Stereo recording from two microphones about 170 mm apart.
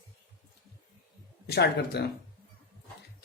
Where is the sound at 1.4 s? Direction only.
70° left (ahead or behind).